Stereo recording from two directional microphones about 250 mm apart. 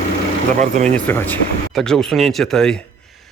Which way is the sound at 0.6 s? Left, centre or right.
Right.